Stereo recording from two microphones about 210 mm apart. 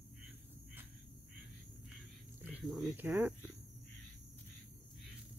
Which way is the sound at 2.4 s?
5° right (ahead or behind).